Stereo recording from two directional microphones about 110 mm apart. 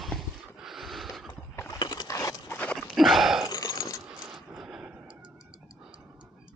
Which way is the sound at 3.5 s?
35° left (ahead or behind).